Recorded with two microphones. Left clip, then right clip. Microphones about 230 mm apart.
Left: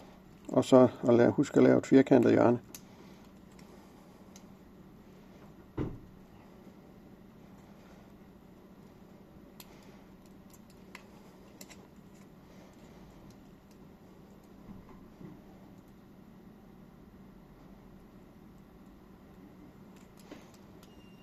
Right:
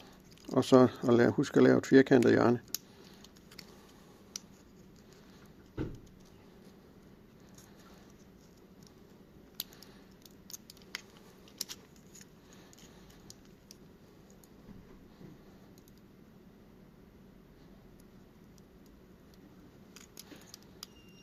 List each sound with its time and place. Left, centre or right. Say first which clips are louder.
0.5 s speech: left 2 dB; right